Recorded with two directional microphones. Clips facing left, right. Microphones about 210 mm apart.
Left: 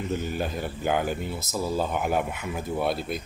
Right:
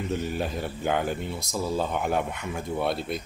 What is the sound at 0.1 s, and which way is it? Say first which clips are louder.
Speech: even; centre (ahead or behind).